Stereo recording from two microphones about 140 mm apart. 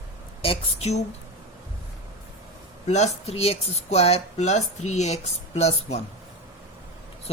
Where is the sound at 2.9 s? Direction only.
50° left (ahead or behind).